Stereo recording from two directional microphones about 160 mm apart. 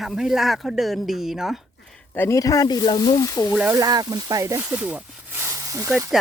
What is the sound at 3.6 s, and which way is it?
Speech, 20° right (ahead or behind).